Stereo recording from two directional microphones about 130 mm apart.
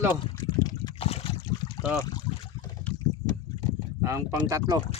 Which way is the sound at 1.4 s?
35° left (ahead or behind).